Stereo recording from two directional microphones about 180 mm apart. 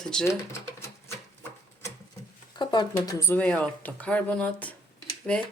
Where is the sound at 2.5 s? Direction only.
25° left (ahead or behind).